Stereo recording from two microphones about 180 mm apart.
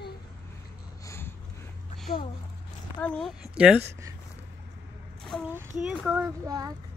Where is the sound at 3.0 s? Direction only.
5° left (ahead or behind).